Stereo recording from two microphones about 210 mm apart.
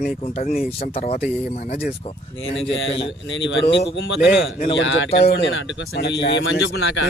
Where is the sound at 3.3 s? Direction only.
60° left (ahead or behind).